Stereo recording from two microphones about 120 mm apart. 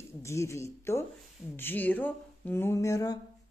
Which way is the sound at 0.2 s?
25° left (ahead or behind).